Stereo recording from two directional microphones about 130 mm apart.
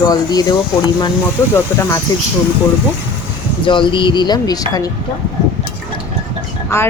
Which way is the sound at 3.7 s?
40° left (ahead or behind).